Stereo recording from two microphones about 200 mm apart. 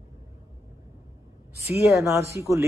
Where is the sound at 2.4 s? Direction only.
15° right (ahead or behind).